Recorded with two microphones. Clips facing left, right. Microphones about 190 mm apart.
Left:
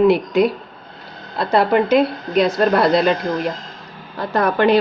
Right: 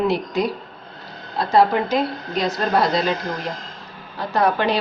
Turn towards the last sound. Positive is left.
turn(degrees=55)  # may be behind; listen again after turning